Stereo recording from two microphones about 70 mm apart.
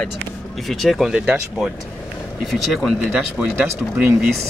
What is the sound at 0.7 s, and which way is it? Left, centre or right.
Speech, centre.